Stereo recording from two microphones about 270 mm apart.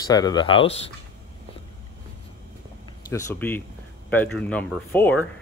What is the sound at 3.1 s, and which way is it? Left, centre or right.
Speech, centre.